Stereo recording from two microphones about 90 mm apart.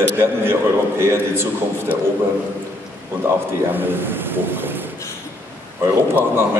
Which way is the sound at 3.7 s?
25° right (ahead or behind).